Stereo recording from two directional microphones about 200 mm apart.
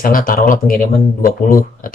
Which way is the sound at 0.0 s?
45° left (ahead or behind).